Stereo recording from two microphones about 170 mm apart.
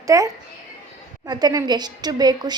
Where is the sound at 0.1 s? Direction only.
20° right (ahead or behind).